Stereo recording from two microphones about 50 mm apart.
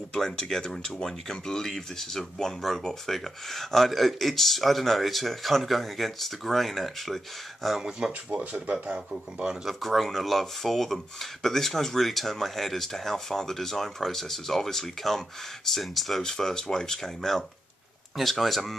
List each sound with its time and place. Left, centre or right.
0.1 s speech: centre
8.3 s speech: right
9.7 s speech: centre